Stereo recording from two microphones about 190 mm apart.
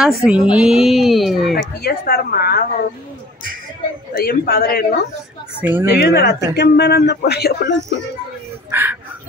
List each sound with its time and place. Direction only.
0.0 s speech: centre (ahead or behind)
1.6 s speech: 55° left (ahead or behind)
4.1 s speech: 50° left (ahead or behind)
5.6 s speech: 10° right (ahead or behind)
5.9 s speech: 60° left (ahead or behind)
8.6 s speech: 10° right (ahead or behind)